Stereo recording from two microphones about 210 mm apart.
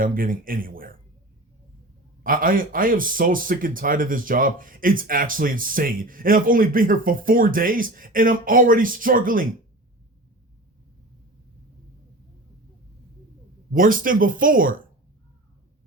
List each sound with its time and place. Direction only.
0.0 s speech: 40° right (ahead or behind)
2.2 s a man's voice: 40° right (ahead or behind)
13.7 s a man's voice: 40° right (ahead or behind)